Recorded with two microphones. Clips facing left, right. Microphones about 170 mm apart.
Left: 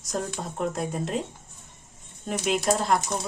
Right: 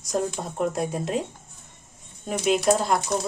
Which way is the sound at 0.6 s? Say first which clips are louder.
Right 3 dB; centre (ahead or behind).